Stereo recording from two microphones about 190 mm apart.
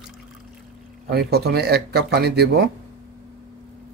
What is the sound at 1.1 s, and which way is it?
Speech, 55° right (ahead or behind).